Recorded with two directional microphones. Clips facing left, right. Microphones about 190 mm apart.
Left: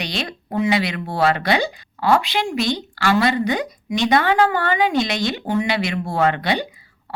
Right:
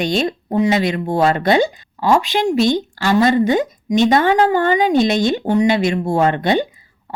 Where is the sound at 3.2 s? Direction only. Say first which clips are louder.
Right 5 dB; 45° right (ahead or behind).